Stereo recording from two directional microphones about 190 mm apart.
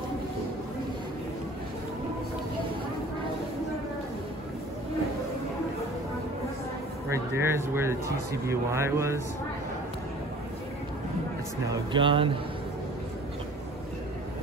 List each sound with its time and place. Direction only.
7.1 s speech: 15° right (ahead or behind)
11.7 s speech: 25° right (ahead or behind)